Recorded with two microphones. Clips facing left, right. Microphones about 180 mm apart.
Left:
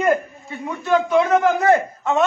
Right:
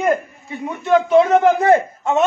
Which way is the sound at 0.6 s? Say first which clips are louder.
Right 3 dB; 20° right (ahead or behind).